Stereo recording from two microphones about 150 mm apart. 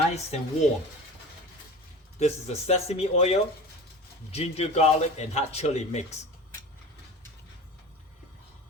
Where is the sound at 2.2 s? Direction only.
45° left (ahead or behind).